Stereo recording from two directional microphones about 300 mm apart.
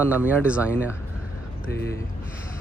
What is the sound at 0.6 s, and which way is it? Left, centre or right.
Speech, centre.